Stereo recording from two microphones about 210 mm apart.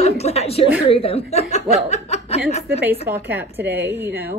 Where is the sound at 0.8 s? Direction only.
25° left (ahead or behind).